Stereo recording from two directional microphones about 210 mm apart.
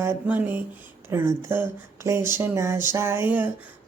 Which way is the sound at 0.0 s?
10° right (ahead or behind).